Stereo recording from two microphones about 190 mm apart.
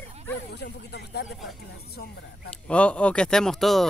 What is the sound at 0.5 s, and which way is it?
Speech, 60° left (ahead or behind).